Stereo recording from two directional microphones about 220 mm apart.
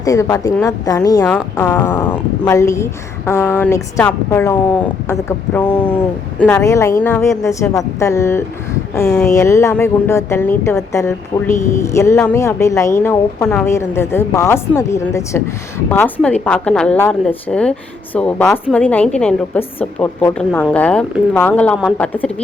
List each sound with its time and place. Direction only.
0.0 s speech: 15° left (ahead or behind)
6.4 s speech: 10° left (ahead or behind)